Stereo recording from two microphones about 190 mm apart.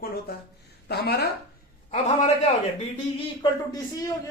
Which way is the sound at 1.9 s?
35° left (ahead or behind).